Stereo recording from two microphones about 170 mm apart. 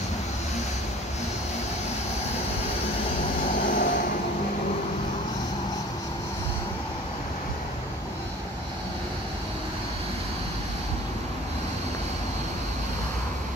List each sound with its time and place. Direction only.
3.5 s vehicle: 55° left (ahead or behind)